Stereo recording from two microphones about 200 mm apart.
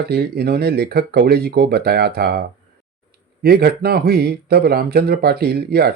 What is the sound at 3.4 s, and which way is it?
Speech, 50° right (ahead or behind).